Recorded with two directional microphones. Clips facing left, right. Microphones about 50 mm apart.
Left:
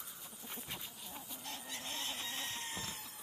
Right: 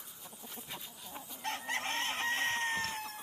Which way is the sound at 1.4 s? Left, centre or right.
Right.